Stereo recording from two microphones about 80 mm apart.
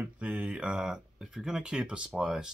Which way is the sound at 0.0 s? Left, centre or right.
Centre.